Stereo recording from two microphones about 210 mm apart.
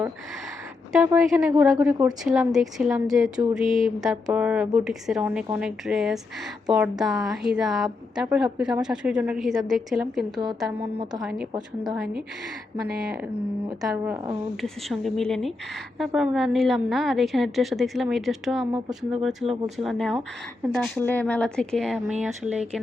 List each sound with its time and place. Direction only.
0.9 s a woman's voice: 5° right (ahead or behind)
10.9 s a woman's voice: 20° right (ahead or behind)
11.2 s a woman's voice: 5° right (ahead or behind)
13.8 s a woman's voice: 5° right (ahead or behind)